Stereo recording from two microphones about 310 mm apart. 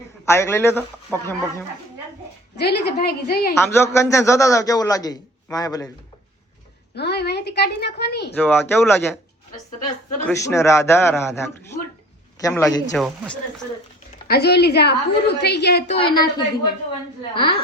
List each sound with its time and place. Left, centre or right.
0.3 s a man's voice: centre
2.6 s a woman's voice: left
3.5 s a man's voice: centre
6.9 s a woman's voice: left
8.4 s a man's voice: centre
10.2 s a man's voice: centre
14.3 s a woman's voice: left
16.0 s a man's voice: centre